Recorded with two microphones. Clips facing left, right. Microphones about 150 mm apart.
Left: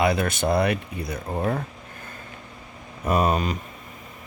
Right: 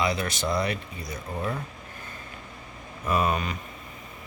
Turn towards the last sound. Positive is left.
turn(degrees=35)  # may be behind; listen again after turning